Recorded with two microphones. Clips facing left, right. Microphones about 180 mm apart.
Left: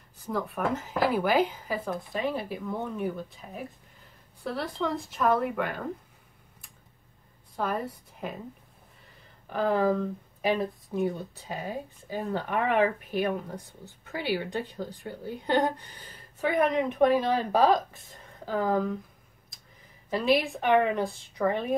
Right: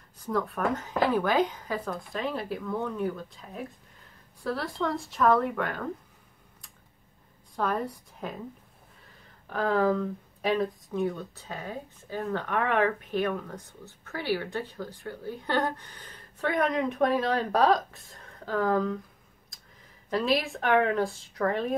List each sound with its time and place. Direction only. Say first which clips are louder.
0.3 s a woman's voice: right 1 dB; centre (ahead or behind)
7.5 s a woman's voice: right 1 dB; 5° left (ahead or behind)
9.5 s a woman's voice: even; centre (ahead or behind)
11.0 s speech: left 1 dB; 15° left (ahead or behind)
20.1 s a woman's voice: left 2 dB; centre (ahead or behind)